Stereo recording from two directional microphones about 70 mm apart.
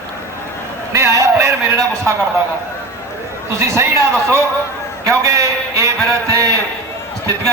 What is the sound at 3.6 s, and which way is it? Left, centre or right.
A man's voice, right.